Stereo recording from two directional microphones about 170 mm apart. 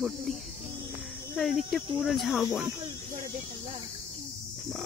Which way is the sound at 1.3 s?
Centre (ahead or behind).